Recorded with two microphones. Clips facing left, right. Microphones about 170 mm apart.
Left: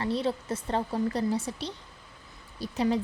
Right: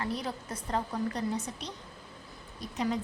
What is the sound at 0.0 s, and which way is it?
A woman's voice, 30° left (ahead or behind).